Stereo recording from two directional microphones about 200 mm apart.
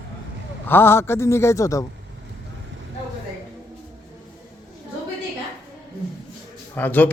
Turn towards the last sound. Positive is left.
turn(degrees=10)  # may be behind; listen again after turning